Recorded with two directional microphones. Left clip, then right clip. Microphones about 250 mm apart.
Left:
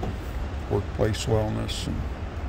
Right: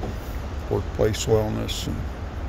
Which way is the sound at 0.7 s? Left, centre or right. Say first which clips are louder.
Right 3 dB; centre.